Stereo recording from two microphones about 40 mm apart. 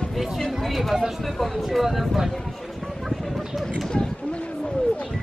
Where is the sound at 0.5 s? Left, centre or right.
Centre.